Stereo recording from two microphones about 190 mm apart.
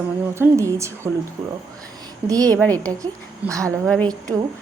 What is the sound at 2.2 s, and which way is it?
A woman's voice, 20° right (ahead or behind).